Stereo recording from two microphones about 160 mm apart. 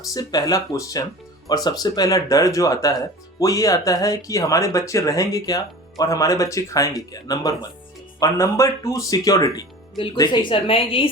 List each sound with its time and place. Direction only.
0.1 s a woman's voice: 25° left (ahead or behind)